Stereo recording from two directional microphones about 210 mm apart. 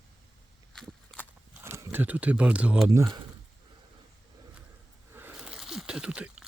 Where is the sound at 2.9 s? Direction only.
15° right (ahead or behind).